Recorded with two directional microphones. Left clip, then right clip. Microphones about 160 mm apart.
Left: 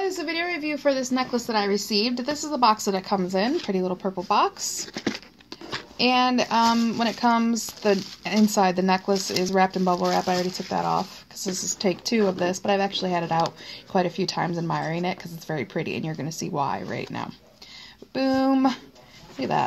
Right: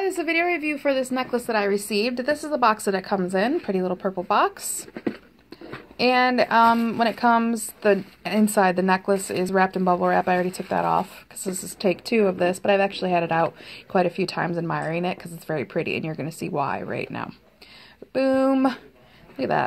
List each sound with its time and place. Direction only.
0.0 s a woman's voice: 40° right (ahead or behind)
1.4 s speech: 25° right (ahead or behind)
5.9 s speech: 20° right (ahead or behind)